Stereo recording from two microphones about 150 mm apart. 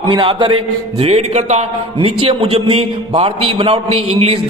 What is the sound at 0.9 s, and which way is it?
A man's voice, 45° right (ahead or behind).